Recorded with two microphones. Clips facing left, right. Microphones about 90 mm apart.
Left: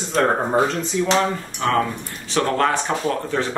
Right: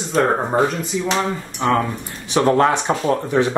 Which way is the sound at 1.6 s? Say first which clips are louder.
Right 2 dB; 20° right (ahead or behind).